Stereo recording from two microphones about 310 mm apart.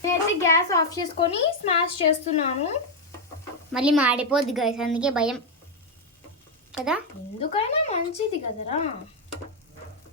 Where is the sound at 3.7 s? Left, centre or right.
Centre.